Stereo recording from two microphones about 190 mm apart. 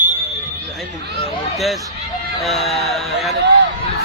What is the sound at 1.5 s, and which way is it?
Speech, centre (ahead or behind).